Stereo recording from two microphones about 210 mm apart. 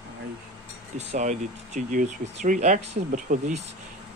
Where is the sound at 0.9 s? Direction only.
35° right (ahead or behind).